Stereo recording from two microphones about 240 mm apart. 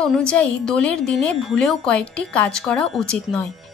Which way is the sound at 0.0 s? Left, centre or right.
Centre.